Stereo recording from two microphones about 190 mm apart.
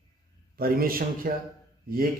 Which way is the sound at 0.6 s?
50° right (ahead or behind).